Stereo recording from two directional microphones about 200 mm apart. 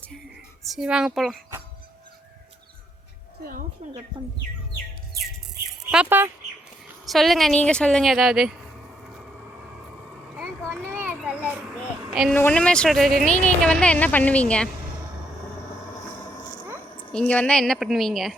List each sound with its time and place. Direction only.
0.7 s speech: 5° right (ahead or behind)
3.4 s a sound: 45° right (ahead or behind)
5.7 s a sound: 5° right (ahead or behind)
7.0 s speech: centre (ahead or behind)
10.3 s vehicle: 5° left (ahead or behind)
10.9 s a child's voice: 10° right (ahead or behind); by 14.7 s 5° left (ahead or behind)
17.1 s speech: 5° left (ahead or behind)